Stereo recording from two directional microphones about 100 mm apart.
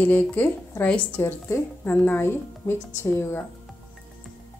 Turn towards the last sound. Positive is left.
turn(degrees=25)  # may be behind; listen again after turning